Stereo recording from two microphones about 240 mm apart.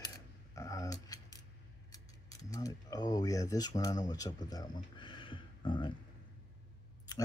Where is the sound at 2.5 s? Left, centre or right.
Centre.